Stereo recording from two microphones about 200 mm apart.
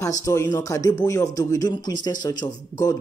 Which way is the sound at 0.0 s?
15° left (ahead or behind).